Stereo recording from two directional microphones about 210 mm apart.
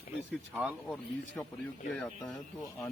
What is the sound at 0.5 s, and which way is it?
Speech, 5° right (ahead or behind).